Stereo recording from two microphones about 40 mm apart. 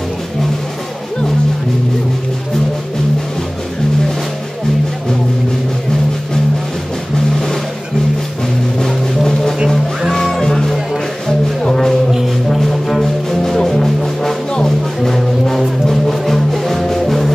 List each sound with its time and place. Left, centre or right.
8.7 s music: centre